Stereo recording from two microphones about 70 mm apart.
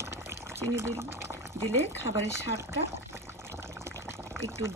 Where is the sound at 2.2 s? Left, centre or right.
Right.